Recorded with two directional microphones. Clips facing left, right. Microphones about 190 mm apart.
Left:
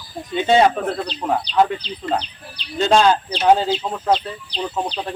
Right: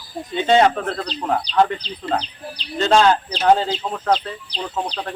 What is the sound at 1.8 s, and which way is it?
Speech, 35° right (ahead or behind).